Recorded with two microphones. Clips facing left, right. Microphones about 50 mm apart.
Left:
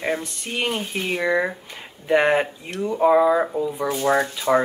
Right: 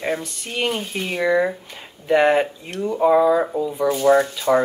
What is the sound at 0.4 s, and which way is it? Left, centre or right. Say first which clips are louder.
Speech: right 1 dB; centre.